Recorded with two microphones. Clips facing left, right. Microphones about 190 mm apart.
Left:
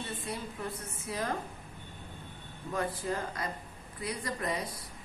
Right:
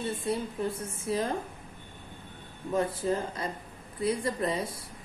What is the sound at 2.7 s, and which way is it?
A woman's voice, 25° right (ahead or behind).